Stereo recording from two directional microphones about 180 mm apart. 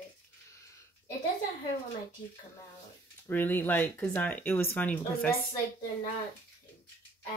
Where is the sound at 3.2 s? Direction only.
10° left (ahead or behind).